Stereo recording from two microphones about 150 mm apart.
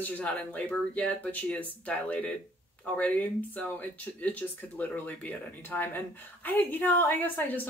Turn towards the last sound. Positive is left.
turn(degrees=10)  # may be behind; listen again after turning